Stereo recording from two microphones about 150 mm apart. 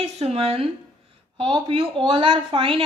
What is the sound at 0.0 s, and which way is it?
A woman's voice, 45° right (ahead or behind).